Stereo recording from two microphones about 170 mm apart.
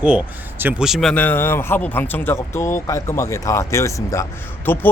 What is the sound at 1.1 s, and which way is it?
Speech, 10° left (ahead or behind).